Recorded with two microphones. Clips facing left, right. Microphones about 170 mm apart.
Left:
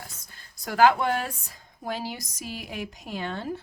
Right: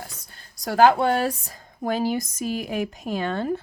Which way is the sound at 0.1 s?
70° right (ahead or behind).